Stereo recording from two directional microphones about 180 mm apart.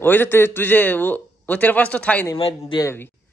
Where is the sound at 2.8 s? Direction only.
15° left (ahead or behind).